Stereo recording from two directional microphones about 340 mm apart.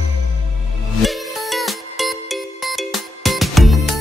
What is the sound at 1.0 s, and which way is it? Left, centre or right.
Music, centre.